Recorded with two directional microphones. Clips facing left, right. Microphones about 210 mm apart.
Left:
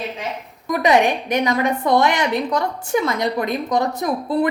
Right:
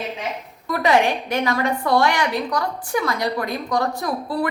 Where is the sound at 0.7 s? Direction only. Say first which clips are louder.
Left 2 dB; 20° left (ahead or behind).